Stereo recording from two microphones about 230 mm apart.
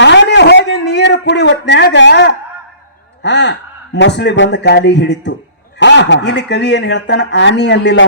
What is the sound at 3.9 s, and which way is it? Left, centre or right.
A man's voice, left.